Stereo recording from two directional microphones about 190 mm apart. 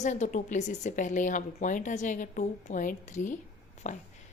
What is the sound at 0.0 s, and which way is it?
A woman's voice, 40° left (ahead or behind).